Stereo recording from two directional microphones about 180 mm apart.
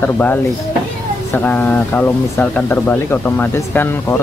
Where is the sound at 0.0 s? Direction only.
10° left (ahead or behind).